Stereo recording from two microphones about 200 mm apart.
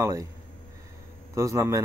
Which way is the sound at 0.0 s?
15° right (ahead or behind).